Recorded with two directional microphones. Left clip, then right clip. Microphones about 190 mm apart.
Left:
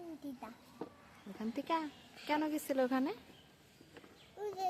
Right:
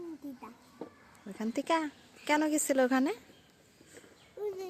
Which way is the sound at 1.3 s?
30° right (ahead or behind).